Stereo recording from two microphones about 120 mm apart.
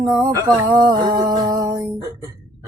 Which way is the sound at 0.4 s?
35° right (ahead or behind).